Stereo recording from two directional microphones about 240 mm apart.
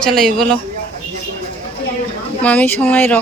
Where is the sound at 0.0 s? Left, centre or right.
Centre.